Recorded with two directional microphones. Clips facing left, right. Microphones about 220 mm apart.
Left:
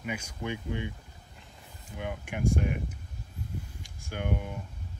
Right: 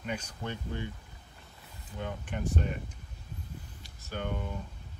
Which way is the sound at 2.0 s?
10° left (ahead or behind).